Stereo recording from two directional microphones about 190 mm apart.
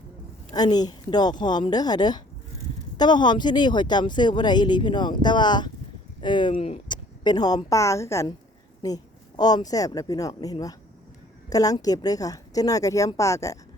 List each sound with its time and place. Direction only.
0.5 s a woman's voice: 20° left (ahead or behind)